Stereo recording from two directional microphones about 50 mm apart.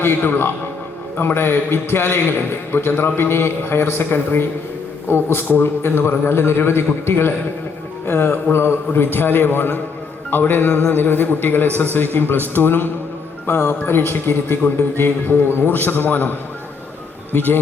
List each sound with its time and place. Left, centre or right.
0.0 s a man's voice: left
12.5 s a man's voice: left
17.3 s speech: left